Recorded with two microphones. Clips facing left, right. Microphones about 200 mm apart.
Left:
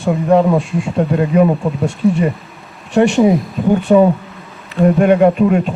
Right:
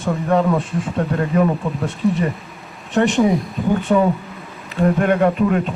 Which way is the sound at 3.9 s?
25° left (ahead or behind).